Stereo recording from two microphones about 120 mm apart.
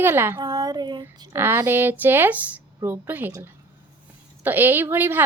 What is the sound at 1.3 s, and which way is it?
A woman's voice, 20° right (ahead or behind).